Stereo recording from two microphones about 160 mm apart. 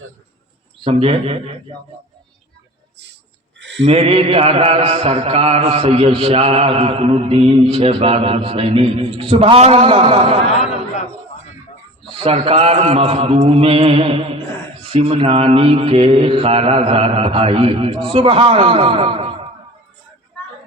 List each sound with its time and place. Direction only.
0.9 s mantra: 40° right (ahead or behind)
3.6 s a sound: 90° right
3.8 s mantra: 40° right (ahead or behind)
12.2 s mantra: 35° right (ahead or behind)